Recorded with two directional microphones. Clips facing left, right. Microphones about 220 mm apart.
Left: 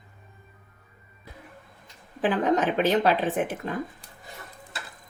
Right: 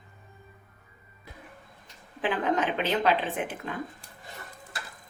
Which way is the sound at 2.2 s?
40° left (ahead or behind).